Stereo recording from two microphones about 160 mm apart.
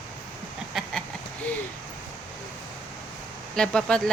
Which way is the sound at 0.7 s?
Centre (ahead or behind).